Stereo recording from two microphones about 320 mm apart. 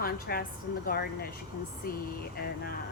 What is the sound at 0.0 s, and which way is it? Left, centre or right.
A woman's voice, left.